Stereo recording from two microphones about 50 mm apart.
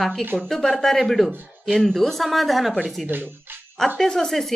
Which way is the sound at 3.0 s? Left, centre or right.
Right.